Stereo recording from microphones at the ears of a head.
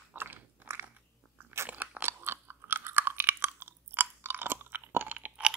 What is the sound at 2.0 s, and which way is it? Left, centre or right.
Chewing, right.